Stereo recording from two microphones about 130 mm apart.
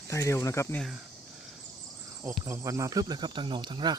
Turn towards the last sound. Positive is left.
turn(degrees=-35)  # may be behind; listen again after turning